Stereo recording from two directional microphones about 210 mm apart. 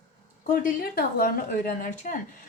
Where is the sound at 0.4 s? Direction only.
40° left (ahead or behind).